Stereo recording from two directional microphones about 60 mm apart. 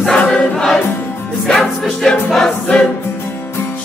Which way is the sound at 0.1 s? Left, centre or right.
Centre.